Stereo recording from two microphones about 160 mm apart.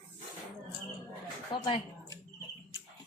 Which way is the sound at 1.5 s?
30° left (ahead or behind).